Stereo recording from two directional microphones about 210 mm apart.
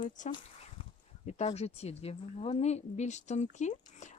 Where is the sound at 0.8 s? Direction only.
25° left (ahead or behind).